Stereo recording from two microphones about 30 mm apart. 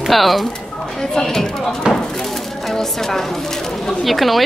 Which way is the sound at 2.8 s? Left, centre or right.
Centre.